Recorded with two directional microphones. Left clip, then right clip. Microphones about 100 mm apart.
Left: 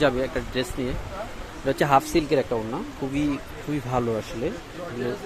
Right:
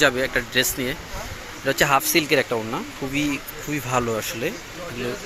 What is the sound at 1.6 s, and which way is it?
Speech, 30° left (ahead or behind).